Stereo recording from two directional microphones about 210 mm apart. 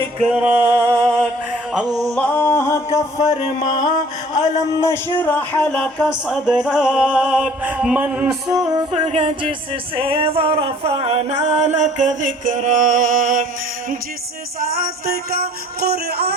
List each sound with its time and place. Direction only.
0.0 s music: centre (ahead or behind)
3.6 s mantra: 35° left (ahead or behind)
4.9 s speech: 10° left (ahead or behind); by 8.4 s 5° right (ahead or behind)
8.4 s singing: 20° right (ahead or behind); by 13.5 s 40° right (ahead or behind)
14.8 s music: 45° right (ahead or behind)